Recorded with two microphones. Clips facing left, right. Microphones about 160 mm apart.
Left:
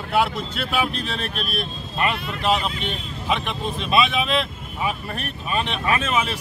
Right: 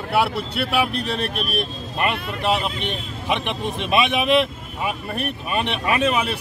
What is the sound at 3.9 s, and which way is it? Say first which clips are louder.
Speech: right 1 dB; 15° right (ahead or behind).